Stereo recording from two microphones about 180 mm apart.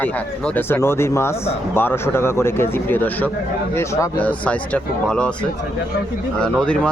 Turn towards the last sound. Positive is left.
turn(degrees=5)  # may be behind; listen again after turning